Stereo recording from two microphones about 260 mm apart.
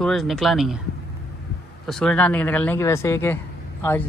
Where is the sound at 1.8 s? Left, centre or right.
Centre.